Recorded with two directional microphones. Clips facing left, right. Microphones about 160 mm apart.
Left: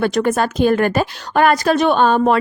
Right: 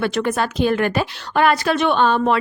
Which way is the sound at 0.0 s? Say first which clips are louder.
Left 4 dB; 40° left (ahead or behind).